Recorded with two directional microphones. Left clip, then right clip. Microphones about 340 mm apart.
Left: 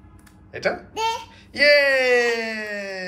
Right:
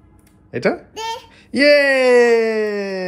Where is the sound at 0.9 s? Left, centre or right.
Centre.